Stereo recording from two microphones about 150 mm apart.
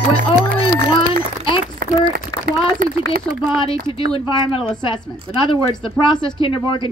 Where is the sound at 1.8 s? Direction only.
80° right.